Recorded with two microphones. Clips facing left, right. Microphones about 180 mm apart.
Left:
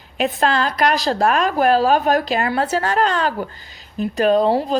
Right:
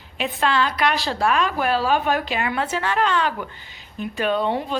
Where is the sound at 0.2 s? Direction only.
40° left (ahead or behind).